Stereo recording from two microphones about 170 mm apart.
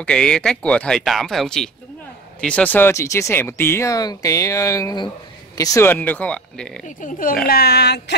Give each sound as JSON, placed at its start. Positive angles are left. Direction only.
{"t": 0.0, "sound": "speech", "side_deg": 5}
{"t": 7.0, "sound": "speech", "side_deg": 55}
{"t": 7.4, "sound": "speech", "side_deg": 65}